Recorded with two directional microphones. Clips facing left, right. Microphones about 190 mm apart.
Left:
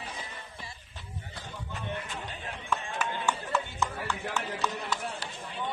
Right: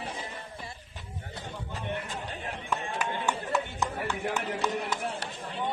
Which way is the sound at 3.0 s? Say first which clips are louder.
Right 1 dB; 15° right (ahead or behind).